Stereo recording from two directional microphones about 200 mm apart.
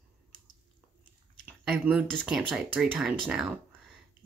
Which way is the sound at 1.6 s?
Centre (ahead or behind).